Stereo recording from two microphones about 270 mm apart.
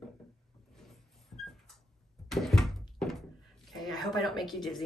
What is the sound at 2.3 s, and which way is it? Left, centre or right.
Thunk, centre.